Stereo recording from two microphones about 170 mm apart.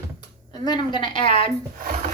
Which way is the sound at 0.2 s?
25° left (ahead or behind).